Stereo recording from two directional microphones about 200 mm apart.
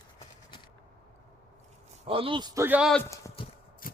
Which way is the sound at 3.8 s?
45° left (ahead or behind).